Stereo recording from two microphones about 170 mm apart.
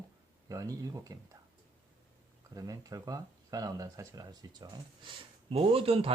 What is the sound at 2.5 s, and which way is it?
Speech, 20° right (ahead or behind).